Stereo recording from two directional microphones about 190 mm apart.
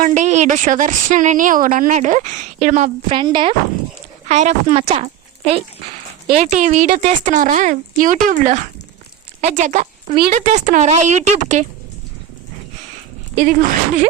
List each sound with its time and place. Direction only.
0.0 s speech: 40° right (ahead or behind)
3.1 s speech: 25° right (ahead or behind)
4.3 s a woman's voice: 35° right (ahead or behind)
13.3 s speech: 45° right (ahead or behind)